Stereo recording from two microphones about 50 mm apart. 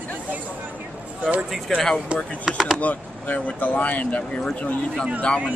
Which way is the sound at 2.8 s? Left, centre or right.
Left.